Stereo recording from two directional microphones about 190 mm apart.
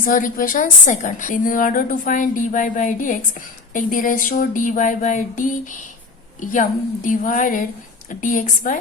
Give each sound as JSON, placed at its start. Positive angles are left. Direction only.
{"t": 0.0, "sound": "a woman's voice", "side_deg": 45}